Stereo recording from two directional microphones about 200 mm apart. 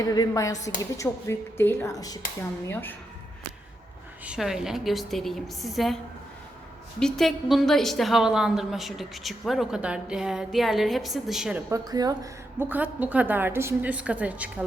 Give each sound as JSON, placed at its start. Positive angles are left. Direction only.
{"t": 0.0, "sound": "a woman's voice", "side_deg": 20}
{"t": 4.3, "sound": "a woman's voice", "side_deg": 0}
{"t": 7.0, "sound": "a woman's voice", "side_deg": 0}
{"t": 11.7, "sound": "a woman's voice", "side_deg": -20}